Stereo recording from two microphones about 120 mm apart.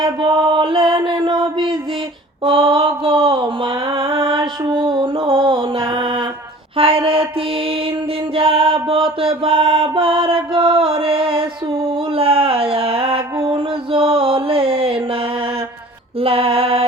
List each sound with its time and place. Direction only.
0.0 s mantra: 40° right (ahead or behind)
8.4 s music: 50° right (ahead or behind)
12.1 s a sound: 50° right (ahead or behind)
16.2 s mantra: 50° right (ahead or behind)